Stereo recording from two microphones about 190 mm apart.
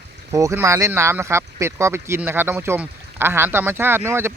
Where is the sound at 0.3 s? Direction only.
15° right (ahead or behind).